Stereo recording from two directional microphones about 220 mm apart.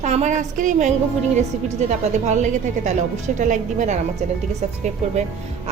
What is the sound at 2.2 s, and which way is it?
A woman's voice, 35° right (ahead or behind).